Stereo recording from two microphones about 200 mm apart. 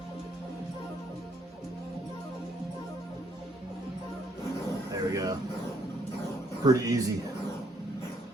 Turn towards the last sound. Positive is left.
turn(degrees=-15)  # may be behind; listen again after turning